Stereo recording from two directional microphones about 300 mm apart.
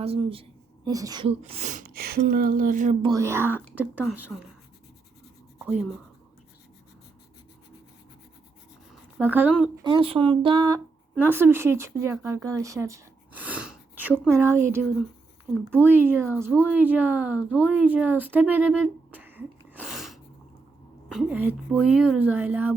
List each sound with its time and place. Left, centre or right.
0.0 s a woman's voice: centre
5.5 s writing: centre
9.1 s a woman's voice: centre
9.8 s a woman's voice: centre